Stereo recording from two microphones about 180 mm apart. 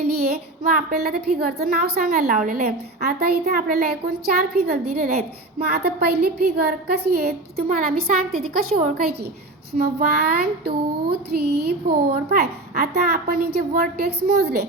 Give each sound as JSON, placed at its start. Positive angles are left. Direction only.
{"t": 0.0, "sound": "a child's voice", "side_deg": -55}